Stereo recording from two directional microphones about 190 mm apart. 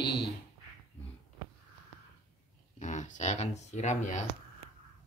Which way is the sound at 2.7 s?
40° left (ahead or behind).